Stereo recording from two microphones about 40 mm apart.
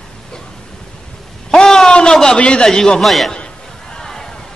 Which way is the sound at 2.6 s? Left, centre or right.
Centre.